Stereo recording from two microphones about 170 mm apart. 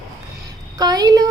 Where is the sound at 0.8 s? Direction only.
25° right (ahead or behind).